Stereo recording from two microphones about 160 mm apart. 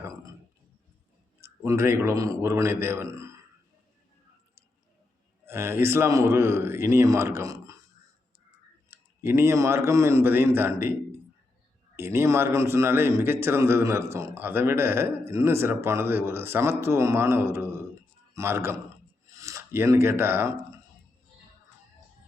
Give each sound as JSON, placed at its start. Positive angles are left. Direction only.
{"t": 0.0, "sound": "a sound", "side_deg": -20}
{"t": 1.4, "sound": "a man's voice", "side_deg": -15}
{"t": 5.5, "sound": "a man's voice", "side_deg": -15}
{"t": 8.9, "sound": "a man's voice", "side_deg": -15}
{"t": 11.9, "sound": "a man's voice", "side_deg": -15}